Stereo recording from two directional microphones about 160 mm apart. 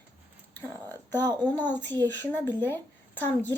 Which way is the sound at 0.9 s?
25° right (ahead or behind).